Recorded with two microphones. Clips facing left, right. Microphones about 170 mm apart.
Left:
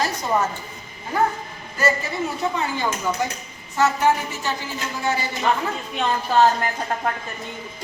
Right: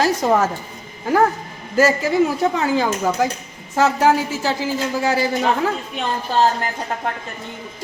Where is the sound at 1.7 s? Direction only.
90° right.